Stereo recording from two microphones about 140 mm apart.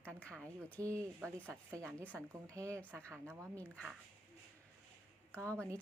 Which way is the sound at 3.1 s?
20° right (ahead or behind).